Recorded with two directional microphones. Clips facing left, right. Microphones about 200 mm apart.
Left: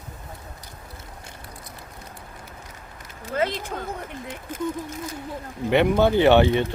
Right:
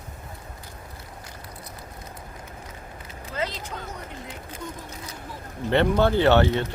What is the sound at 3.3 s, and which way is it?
Speech, 55° left (ahead or behind).